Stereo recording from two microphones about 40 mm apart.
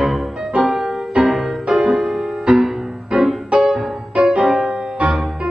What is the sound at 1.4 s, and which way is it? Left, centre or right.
Music, right.